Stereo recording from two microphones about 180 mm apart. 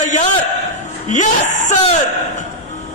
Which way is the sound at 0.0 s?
45° left (ahead or behind).